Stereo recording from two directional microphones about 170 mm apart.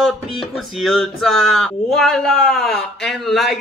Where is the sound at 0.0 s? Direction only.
Centre (ahead or behind).